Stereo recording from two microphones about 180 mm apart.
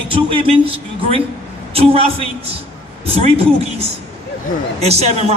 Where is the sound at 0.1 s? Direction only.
30° right (ahead or behind).